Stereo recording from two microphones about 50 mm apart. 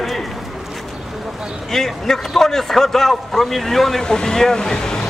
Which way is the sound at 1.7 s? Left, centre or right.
Centre.